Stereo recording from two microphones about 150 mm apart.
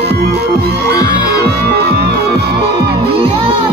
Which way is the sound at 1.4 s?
90° right.